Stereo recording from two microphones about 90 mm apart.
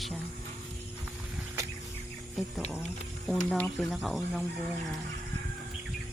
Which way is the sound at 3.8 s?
Centre (ahead or behind).